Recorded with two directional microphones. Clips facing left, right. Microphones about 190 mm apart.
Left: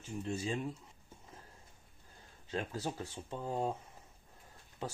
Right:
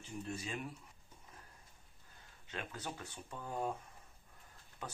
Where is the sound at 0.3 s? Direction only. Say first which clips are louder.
Left 7 dB; 25° left (ahead or behind).